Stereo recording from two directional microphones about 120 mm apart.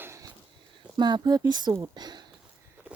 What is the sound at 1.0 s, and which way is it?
A woman's voice, 35° right (ahead or behind).